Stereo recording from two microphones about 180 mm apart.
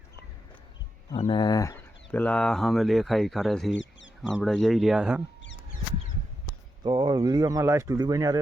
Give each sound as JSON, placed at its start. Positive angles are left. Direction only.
{"t": 1.1, "sound": "speech", "side_deg": 30}
{"t": 2.1, "sound": "speech", "side_deg": 5}
{"t": 6.8, "sound": "speech", "side_deg": -25}